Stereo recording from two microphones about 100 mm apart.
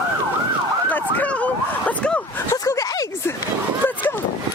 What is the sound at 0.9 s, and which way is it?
Emergency vehicle, 15° left (ahead or behind).